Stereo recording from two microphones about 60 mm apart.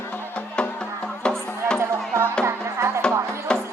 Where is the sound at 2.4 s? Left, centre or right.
Right.